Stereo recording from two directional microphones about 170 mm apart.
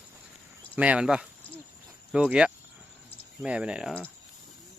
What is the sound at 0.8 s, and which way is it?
Speech, 5° right (ahead or behind).